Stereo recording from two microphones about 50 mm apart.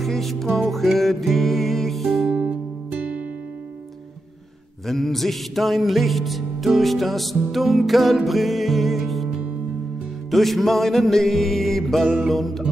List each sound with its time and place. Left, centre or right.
0.0 s music: centre
2.3 s music: right
4.8 s music: centre
10.3 s music: centre